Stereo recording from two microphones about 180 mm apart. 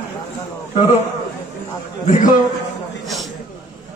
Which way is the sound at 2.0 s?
45° left (ahead or behind).